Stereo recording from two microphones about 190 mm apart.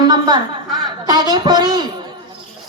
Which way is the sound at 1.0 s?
20° right (ahead or behind).